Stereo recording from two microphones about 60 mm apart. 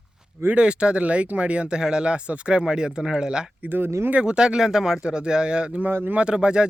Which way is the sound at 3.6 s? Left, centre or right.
Right.